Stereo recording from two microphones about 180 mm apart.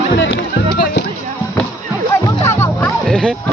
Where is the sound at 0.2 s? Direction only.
90° left.